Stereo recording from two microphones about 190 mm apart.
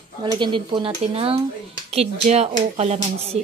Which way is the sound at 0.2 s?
25° right (ahead or behind).